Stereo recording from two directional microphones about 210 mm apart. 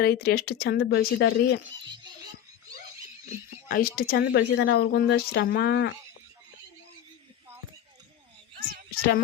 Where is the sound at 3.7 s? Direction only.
45° left (ahead or behind).